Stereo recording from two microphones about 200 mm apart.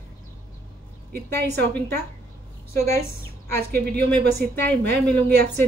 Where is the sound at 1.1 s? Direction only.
55° right (ahead or behind).